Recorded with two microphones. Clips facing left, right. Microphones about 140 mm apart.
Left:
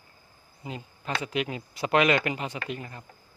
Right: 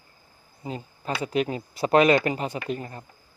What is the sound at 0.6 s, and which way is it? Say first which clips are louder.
Speech: right 4 dB; 35° right (ahead or behind).